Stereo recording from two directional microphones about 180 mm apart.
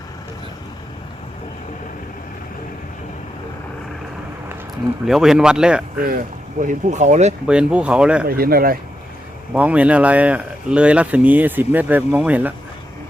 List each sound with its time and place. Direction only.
5.0 s speech: centre (ahead or behind)
6.6 s speech: 45° right (ahead or behind)
7.4 s speech: 5° right (ahead or behind)
8.3 s speech: 55° right (ahead or behind)
9.5 s speech: 10° right (ahead or behind)